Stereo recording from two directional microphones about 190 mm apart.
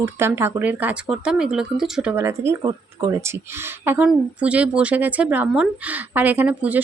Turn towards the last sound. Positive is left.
turn(degrees=-10)  # may be behind; listen again after turning